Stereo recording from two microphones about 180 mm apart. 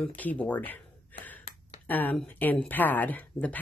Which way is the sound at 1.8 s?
10° left (ahead or behind).